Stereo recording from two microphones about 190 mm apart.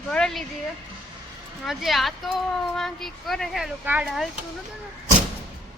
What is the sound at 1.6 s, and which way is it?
Speech, centre (ahead or behind).